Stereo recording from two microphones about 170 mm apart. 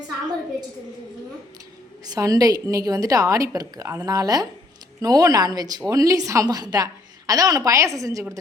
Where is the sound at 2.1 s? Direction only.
20° right (ahead or behind).